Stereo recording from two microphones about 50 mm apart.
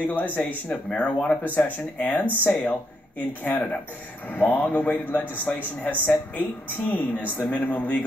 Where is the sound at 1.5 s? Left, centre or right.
Left.